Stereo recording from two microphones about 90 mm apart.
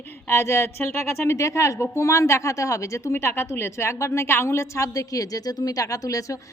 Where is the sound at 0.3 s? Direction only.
30° left (ahead or behind).